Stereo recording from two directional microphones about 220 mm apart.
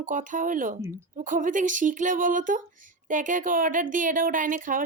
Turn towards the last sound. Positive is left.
turn(degrees=-40)  # may be behind; listen again after turning